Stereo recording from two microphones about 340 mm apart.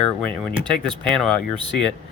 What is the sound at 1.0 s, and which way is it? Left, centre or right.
Speech, centre.